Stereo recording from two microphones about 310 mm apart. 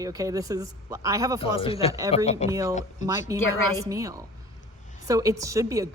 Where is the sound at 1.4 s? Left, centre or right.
Centre.